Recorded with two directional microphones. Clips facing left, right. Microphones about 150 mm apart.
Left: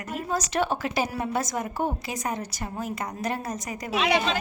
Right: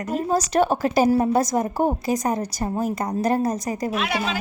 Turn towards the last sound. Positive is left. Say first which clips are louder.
# left 1 dB
turn(degrees=-5)  # may be behind; listen again after turning